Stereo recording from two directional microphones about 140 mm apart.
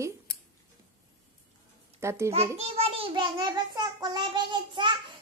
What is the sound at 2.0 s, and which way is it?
Speech, 20° right (ahead or behind).